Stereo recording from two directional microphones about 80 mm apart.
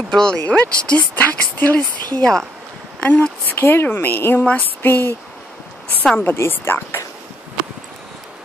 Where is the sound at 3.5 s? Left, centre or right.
Left.